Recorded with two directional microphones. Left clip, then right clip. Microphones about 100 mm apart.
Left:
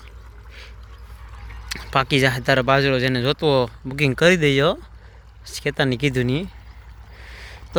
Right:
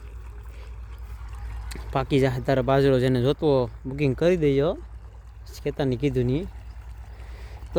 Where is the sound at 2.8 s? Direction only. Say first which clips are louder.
Left 1 dB; 55° right (ahead or behind).